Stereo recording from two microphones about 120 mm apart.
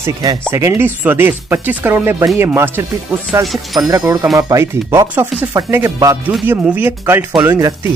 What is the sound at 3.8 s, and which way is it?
Speech, 30° right (ahead or behind).